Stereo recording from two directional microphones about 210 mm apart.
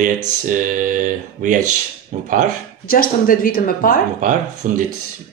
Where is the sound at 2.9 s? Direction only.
45° left (ahead or behind).